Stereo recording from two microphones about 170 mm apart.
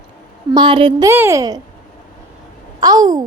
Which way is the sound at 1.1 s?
15° right (ahead or behind).